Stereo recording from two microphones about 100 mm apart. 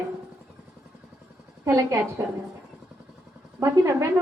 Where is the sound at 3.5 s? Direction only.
30° right (ahead or behind).